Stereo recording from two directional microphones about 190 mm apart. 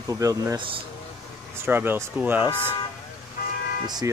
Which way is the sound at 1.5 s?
10° right (ahead or behind).